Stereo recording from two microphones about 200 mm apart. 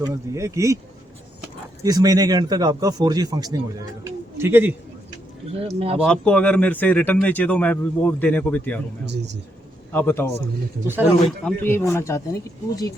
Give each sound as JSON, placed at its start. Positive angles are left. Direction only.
{"t": 0.0, "sound": "speech", "side_deg": -15}
{"t": 1.8, "sound": "speech", "side_deg": -20}
{"t": 5.5, "sound": "speech", "side_deg": -30}
{"t": 6.0, "sound": "a man's voice", "side_deg": 5}
{"t": 9.9, "sound": "a man's voice", "side_deg": 10}